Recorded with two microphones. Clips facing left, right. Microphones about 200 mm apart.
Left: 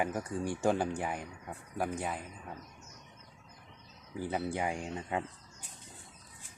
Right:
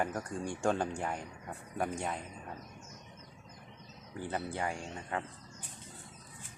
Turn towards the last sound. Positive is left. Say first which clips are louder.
# left 3 dB
turn(degrees=15)  # may be behind; listen again after turning